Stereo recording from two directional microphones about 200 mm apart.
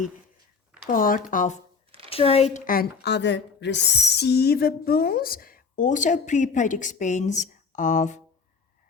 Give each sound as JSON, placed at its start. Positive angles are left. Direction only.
{"t": 0.9, "sound": "speech", "side_deg": 45}
{"t": 2.0, "sound": "speech", "side_deg": 30}